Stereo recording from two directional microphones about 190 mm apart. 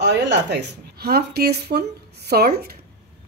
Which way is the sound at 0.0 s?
65° right (ahead or behind).